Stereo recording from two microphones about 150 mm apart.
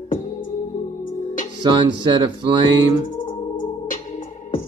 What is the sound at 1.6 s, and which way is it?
Speech, 30° right (ahead or behind).